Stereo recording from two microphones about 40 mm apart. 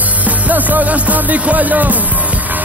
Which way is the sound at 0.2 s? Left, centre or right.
Right.